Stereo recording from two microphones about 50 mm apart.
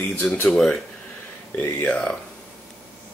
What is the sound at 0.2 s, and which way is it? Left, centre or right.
Speech, left.